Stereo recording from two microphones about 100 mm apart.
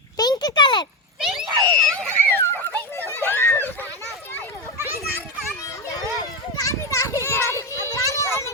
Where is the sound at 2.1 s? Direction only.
20° left (ahead or behind).